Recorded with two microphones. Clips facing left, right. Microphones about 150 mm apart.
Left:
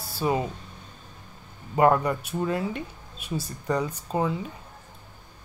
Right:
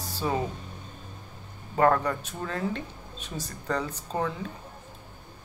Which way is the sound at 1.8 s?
15° left (ahead or behind).